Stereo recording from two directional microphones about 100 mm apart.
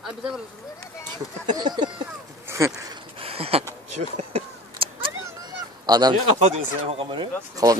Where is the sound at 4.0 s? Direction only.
90° right.